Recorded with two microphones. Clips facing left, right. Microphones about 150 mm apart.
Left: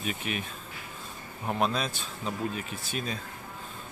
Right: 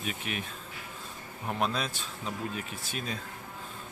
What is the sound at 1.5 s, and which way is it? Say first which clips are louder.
Speech: left 3 dB; 35° left (ahead or behind).